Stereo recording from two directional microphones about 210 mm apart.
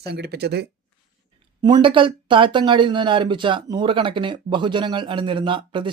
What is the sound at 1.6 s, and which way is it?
Speech, 20° right (ahead or behind).